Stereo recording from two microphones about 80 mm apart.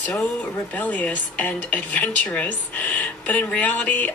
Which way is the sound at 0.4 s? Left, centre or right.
Centre.